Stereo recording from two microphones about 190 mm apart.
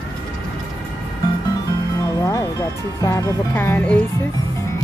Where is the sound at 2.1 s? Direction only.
20° left (ahead or behind).